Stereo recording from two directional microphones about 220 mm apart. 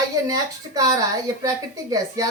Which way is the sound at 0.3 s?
15° right (ahead or behind).